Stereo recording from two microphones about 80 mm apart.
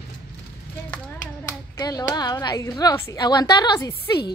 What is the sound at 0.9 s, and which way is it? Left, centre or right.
Clapping, centre.